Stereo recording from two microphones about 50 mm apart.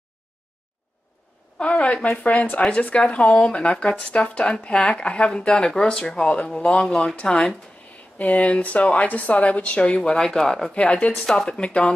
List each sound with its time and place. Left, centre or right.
1.6 s speech: left
6.9 s speech: centre
8.2 s speech: left; by 10.7 s centre
10.7 s speech: left